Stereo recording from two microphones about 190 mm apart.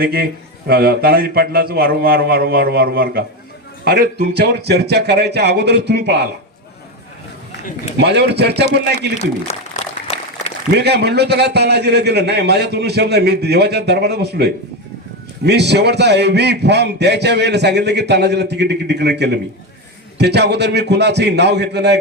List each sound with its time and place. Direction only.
0.0 s a man's voice: 55° right (ahead or behind)
7.9 s a man's voice: 60° right (ahead or behind)
9.5 s speech: 35° left (ahead or behind)
10.8 s a man's voice: 60° right (ahead or behind)